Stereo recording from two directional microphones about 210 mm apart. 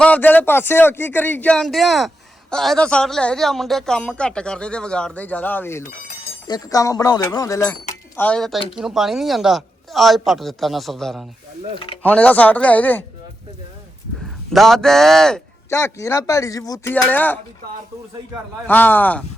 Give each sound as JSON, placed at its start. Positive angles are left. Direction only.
{"t": 0.0, "sound": "speech", "side_deg": 10}
{"t": 14.5, "sound": "speech", "side_deg": 0}
{"t": 15.7, "sound": "speech", "side_deg": 15}
{"t": 18.7, "sound": "speech", "side_deg": 10}